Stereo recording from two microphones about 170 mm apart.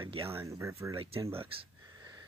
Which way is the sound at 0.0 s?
30° right (ahead or behind).